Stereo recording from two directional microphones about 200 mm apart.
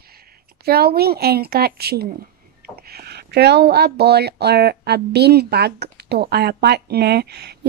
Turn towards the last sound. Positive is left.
turn(degrees=-55)  # may be behind; listen again after turning